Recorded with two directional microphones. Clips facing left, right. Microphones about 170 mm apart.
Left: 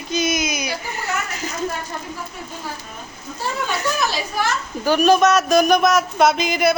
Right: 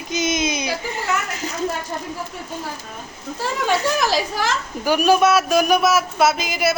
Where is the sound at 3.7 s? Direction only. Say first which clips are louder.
Right 5 dB; 90° right.